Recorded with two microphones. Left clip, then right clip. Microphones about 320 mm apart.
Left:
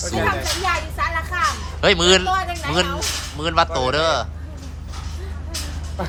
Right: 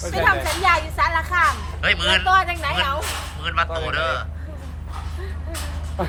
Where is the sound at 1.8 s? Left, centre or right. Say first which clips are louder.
Left 4 dB; centre.